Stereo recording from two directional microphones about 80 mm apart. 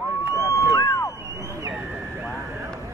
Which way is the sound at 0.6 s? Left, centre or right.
Left.